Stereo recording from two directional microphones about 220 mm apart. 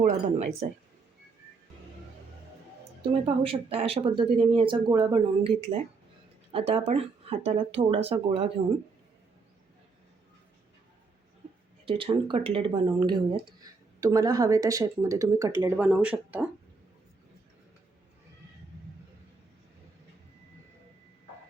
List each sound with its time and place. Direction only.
0.0 s speech: 30° right (ahead or behind)
3.2 s speech: 25° right (ahead or behind)
11.9 s speech: 25° right (ahead or behind); by 16.5 s 5° right (ahead or behind)